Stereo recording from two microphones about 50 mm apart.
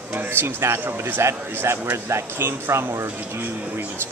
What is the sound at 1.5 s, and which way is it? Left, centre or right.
Speech, right.